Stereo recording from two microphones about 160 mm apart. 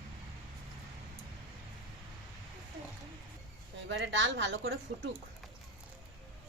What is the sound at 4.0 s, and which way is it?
Speech, 90° right.